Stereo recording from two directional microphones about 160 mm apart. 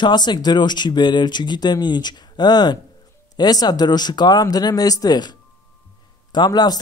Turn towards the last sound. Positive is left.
turn(degrees=25)  # may be behind; listen again after turning